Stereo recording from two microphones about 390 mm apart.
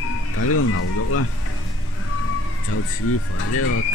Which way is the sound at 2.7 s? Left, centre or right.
Left.